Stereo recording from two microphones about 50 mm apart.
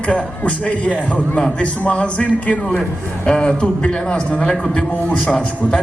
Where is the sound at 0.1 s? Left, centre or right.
Left.